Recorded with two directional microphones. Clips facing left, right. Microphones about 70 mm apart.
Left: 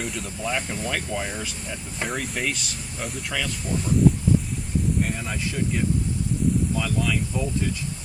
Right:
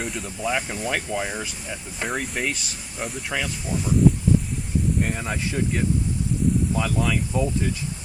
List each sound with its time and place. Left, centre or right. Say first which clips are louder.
0.0 s speech: right 2 dB; centre
3.3 s speech: even; centre
5.1 s speech: right 2 dB; right